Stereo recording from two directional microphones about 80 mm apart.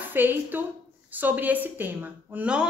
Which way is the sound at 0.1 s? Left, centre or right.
Right.